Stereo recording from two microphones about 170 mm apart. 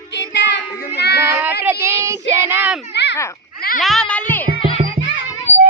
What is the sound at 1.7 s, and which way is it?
Child singing, 15° right (ahead or behind).